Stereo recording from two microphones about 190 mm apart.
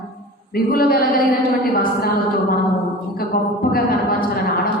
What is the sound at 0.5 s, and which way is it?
A woman's voice, 50° left (ahead or behind).